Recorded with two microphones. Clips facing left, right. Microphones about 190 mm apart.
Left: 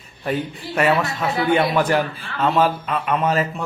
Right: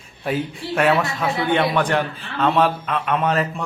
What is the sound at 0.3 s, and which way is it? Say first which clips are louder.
A man's voice: right 1 dB; centre (ahead or behind).